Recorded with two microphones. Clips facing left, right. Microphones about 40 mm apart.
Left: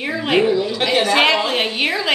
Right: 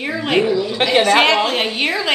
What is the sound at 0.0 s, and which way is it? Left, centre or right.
A woman's voice, centre.